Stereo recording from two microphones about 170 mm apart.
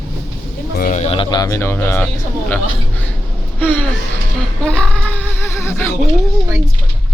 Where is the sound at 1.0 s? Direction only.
30° left (ahead or behind); by 2.1 s 15° left (ahead or behind).